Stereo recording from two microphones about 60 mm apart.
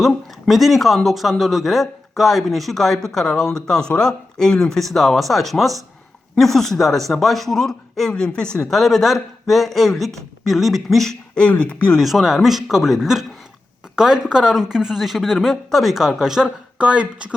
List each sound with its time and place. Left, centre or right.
0.0 s speech: centre
8.7 s speech: centre
11.3 s speech: centre
11.9 s speech: centre
16.7 s speech: centre